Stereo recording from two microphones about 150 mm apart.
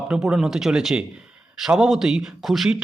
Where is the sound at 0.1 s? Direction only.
5° right (ahead or behind).